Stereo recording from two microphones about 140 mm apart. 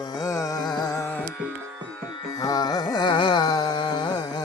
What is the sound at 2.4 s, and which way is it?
Carnatic music, 25° left (ahead or behind).